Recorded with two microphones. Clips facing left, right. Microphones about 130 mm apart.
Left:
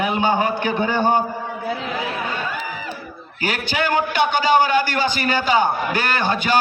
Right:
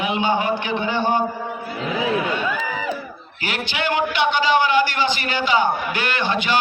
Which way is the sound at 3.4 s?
40° left (ahead or behind).